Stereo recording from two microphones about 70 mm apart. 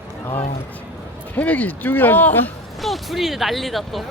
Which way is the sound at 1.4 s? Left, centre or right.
Left.